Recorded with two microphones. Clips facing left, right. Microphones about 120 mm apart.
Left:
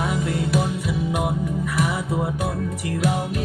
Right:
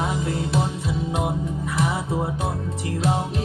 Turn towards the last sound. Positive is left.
turn(degrees=-25)  # may be behind; listen again after turning